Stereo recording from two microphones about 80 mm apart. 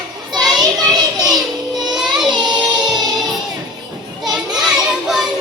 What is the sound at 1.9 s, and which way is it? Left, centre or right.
Child singing, centre.